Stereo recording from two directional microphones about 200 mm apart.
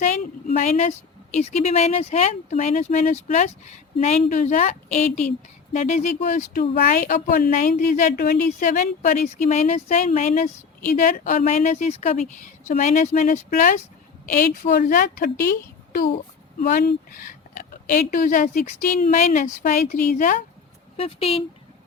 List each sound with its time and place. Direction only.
0.0 s a woman's voice: 35° left (ahead or behind)
20.9 s speech: 30° left (ahead or behind)